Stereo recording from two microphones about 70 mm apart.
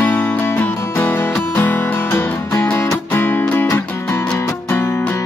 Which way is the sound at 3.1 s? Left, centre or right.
Left.